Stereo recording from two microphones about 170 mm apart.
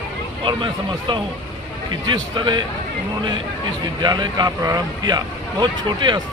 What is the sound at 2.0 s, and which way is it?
Speech, 25° right (ahead or behind).